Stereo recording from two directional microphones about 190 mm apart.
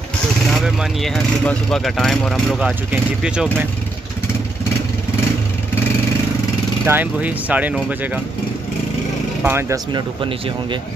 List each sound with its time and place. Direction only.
0.5 s speech: centre (ahead or behind)
6.9 s speech: 10° right (ahead or behind)
9.4 s speech: 10° right (ahead or behind)
9.9 s speech: 25° right (ahead or behind)